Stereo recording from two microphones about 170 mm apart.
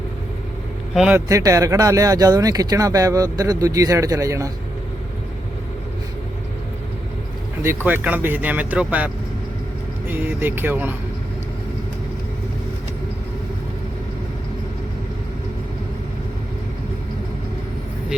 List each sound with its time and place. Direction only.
0.9 s speech: 5° right (ahead or behind)
1.3 s speech: 20° right (ahead or behind)
7.9 s speech: 10° right (ahead or behind)
10.1 s speech: 10° right (ahead or behind)